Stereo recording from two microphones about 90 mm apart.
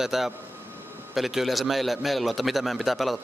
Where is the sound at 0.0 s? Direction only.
5° right (ahead or behind).